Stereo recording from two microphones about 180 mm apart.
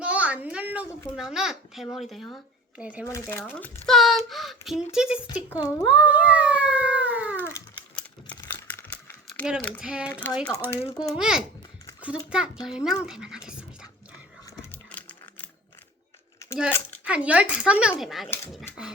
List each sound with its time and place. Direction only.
0.0 s a sound: 10° right (ahead or behind)
1.1 s speech: centre (ahead or behind)
3.1 s a child's voice: 15° left (ahead or behind)
3.8 s a sound: centre (ahead or behind)
4.3 s speech: centre (ahead or behind)
7.4 s crumpling: 10° left (ahead or behind)
9.2 s speech: 5° left (ahead or behind)
9.8 s speech: 5° right (ahead or behind)
10.7 s a child's voice: 15° left (ahead or behind)
11.1 s speech: 5° right (ahead or behind)
14.7 s a sound: 10° left (ahead or behind)
17.1 s speech: 5° right (ahead or behind)